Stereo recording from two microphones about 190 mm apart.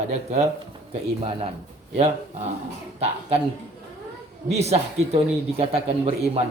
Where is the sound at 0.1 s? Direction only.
35° right (ahead or behind).